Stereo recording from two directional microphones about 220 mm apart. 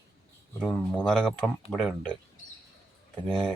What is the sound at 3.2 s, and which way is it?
Speech, 5° left (ahead or behind).